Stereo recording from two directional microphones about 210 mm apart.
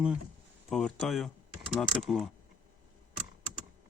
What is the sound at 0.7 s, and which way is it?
Speech, centre (ahead or behind).